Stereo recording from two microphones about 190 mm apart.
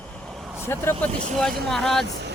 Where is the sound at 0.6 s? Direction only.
10° left (ahead or behind).